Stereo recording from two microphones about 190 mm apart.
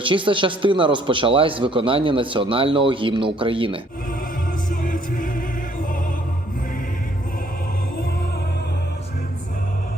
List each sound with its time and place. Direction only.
0.0 s a man's voice: 25° right (ahead or behind)
4.7 s music: 45° left (ahead or behind)